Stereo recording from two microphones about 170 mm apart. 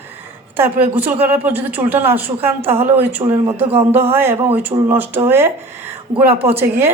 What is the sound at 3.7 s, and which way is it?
Speech, 35° right (ahead or behind).